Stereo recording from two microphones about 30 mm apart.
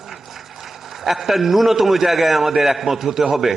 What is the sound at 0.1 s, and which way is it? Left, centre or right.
A man's voice, centre.